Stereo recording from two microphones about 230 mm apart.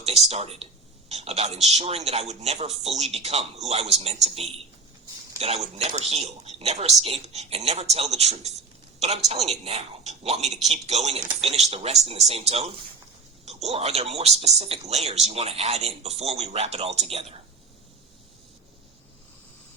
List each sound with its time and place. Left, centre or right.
0.0 s speech: right